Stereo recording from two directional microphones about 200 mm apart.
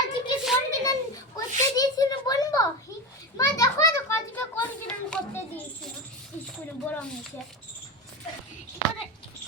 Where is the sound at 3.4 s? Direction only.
15° left (ahead or behind).